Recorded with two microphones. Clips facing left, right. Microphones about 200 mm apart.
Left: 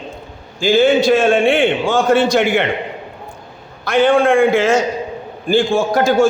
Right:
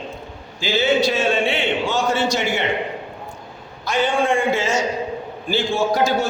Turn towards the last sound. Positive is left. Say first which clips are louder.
# left 5 dB
turn(degrees=50)  # may be behind; listen again after turning